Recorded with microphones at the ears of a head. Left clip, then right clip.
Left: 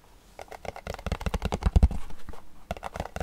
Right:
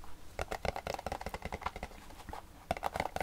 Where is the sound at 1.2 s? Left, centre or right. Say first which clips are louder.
Left 7 dB; left.